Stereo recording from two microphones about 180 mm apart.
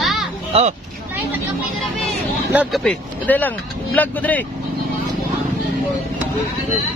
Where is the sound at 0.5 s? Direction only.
30° right (ahead or behind).